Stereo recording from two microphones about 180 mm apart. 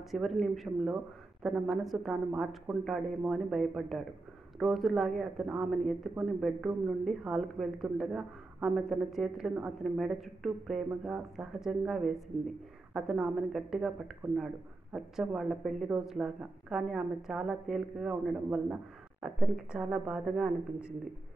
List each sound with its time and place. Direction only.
0.1 s speech: centre (ahead or behind)